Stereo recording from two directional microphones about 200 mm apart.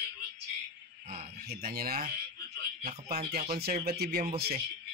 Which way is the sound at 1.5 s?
50° right (ahead or behind).